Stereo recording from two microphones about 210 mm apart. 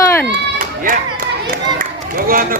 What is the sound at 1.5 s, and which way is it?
Run, 45° right (ahead or behind).